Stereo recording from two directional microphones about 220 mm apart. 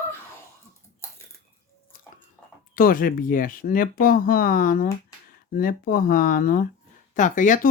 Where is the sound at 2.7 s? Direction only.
40° left (ahead or behind).